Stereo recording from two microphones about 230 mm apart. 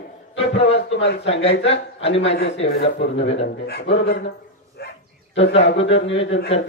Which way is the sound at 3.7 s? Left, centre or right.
Left.